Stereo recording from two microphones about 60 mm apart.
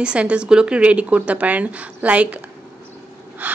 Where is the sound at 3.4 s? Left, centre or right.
Right.